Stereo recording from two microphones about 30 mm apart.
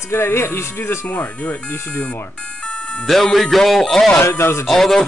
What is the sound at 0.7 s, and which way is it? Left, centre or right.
Speech, left.